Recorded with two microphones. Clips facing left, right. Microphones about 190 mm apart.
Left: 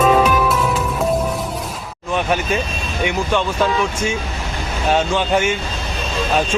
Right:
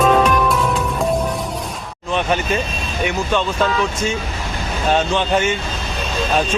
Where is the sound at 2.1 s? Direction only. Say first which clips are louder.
Even; 10° left (ahead or behind).